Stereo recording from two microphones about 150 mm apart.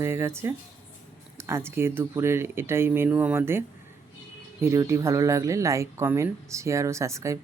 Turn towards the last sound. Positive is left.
turn(degrees=-20)  # may be behind; listen again after turning